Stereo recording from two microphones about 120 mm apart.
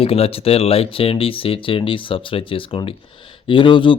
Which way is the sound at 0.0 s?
55° left (ahead or behind).